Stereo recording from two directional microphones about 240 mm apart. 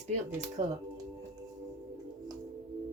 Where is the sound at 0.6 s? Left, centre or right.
Right.